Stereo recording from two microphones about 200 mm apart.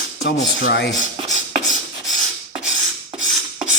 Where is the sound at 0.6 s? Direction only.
60° left (ahead or behind).